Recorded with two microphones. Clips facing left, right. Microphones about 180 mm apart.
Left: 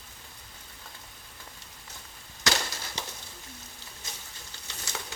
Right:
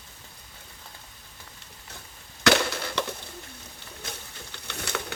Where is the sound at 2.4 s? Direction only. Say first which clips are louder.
Right 9 dB; 60° right (ahead or behind).